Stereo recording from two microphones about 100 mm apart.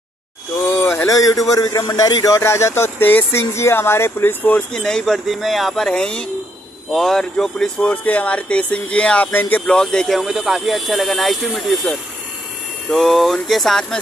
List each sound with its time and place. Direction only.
0.7 s a sound: 20° left (ahead or behind)
1.0 s a man's voice: 35° left (ahead or behind); by 4.6 s 20° left (ahead or behind)
4.7 s speech: 5° left (ahead or behind)